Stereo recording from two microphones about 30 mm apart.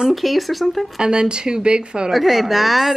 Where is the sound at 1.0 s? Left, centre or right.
Right.